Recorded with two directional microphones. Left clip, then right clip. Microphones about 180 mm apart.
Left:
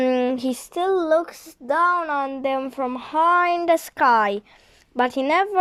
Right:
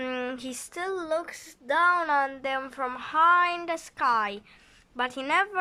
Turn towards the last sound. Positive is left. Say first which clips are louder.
# left 6 dB
turn(degrees=30)  # may be behind; listen again after turning